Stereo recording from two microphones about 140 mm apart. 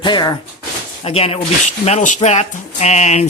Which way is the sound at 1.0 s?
45° left (ahead or behind).